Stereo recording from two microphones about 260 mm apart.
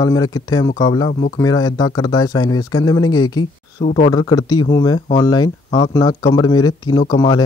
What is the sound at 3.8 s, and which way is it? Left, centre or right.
Speech, left.